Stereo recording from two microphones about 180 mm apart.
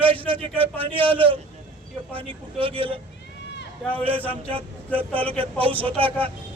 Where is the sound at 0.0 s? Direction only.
30° right (ahead or behind).